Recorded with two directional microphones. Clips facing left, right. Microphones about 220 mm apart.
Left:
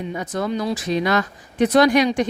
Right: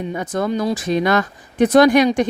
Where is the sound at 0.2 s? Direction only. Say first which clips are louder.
Right 3 dB; 50° right (ahead or behind).